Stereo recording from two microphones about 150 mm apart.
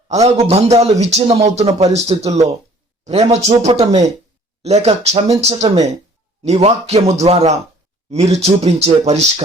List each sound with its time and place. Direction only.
0.1 s a man's voice: 45° right (ahead or behind)